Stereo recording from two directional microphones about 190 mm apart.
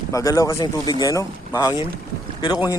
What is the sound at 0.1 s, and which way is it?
Speech, 15° left (ahead or behind).